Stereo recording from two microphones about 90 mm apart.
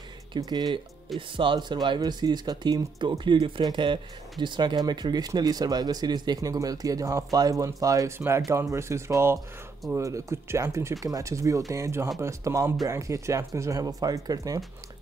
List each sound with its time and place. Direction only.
0.4 s speech: 50° right (ahead or behind)
1.3 s speech: 65° right (ahead or behind); by 14.6 s 40° right (ahead or behind)